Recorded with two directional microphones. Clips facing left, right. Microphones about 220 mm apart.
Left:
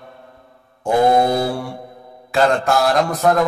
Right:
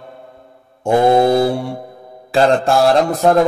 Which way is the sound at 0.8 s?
25° right (ahead or behind).